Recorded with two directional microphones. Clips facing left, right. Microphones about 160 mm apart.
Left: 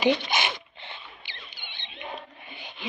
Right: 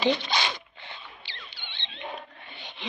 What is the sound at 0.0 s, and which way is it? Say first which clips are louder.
Zipper: left 2 dB; 20° left (ahead or behind).